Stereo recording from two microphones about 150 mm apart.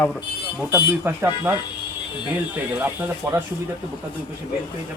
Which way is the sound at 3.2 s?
20° right (ahead or behind).